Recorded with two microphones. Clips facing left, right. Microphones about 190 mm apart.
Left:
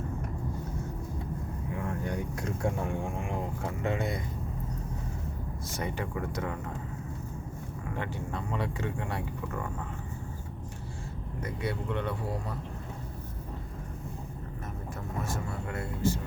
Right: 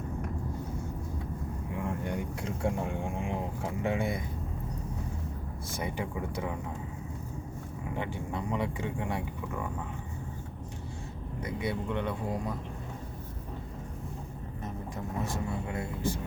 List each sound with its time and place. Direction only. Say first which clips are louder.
1.8 s speech: even; 10° right (ahead or behind)
5.7 s speech: even; 10° right (ahead or behind)
7.9 s speech: right 1 dB; 15° right (ahead or behind)
11.3 s speech: right 1 dB; 15° right (ahead or behind)
15.2 s speech: right 2 dB; 15° right (ahead or behind)